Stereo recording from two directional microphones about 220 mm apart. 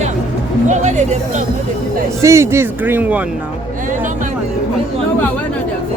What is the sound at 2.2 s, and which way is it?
Speech, 15° right (ahead or behind).